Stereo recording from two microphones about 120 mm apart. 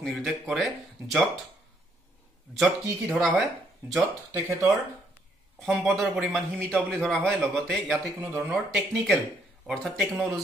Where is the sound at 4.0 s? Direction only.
25° right (ahead or behind).